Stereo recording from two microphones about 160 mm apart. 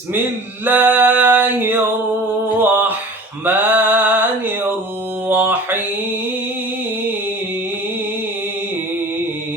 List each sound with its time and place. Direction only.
0.6 s a sound: 10° right (ahead or behind)
3.4 s mantra: 10° right (ahead or behind)
5.3 s mantra: 10° right (ahead or behind)